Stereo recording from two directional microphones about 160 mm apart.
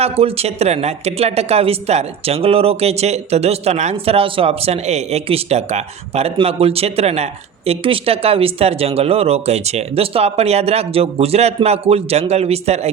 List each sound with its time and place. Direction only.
0.0 s speech: 40° right (ahead or behind)